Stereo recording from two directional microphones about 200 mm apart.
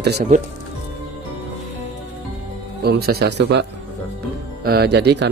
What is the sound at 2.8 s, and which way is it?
Speech, 50° right (ahead or behind).